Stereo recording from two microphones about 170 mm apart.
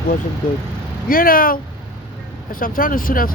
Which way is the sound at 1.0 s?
55° left (ahead or behind).